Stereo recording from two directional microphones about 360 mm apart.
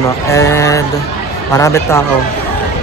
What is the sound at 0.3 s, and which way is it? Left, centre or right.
Speech, centre.